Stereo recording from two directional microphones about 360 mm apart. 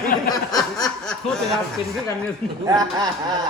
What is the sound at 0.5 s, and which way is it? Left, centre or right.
Snicker, centre.